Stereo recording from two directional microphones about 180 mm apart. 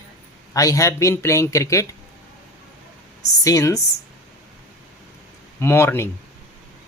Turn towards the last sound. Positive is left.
turn(degrees=15)  # may be behind; listen again after turning